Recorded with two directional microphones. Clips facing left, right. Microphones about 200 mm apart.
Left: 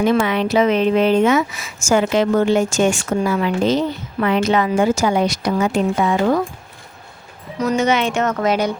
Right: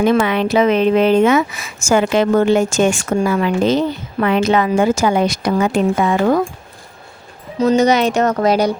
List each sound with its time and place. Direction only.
0.0 s speech: 60° right (ahead or behind)
7.6 s speech: 30° right (ahead or behind)